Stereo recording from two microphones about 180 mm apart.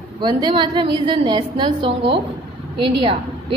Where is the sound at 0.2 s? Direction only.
25° right (ahead or behind).